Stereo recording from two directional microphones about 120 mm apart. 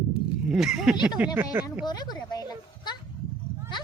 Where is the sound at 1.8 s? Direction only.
35° left (ahead or behind).